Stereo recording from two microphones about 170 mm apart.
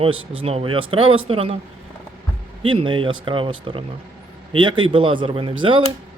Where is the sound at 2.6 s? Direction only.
30° right (ahead or behind).